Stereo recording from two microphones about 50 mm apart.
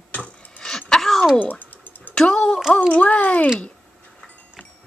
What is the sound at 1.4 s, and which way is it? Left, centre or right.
Typing, left.